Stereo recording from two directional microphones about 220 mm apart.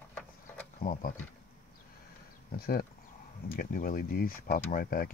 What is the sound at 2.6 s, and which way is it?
Speech, 45° left (ahead or behind).